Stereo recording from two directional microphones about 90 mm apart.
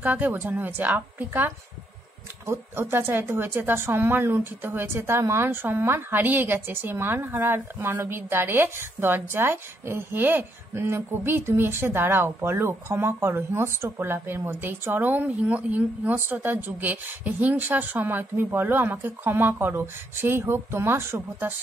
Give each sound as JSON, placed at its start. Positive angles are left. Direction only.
{"t": 0.0, "sound": "a woman's voice", "side_deg": -20}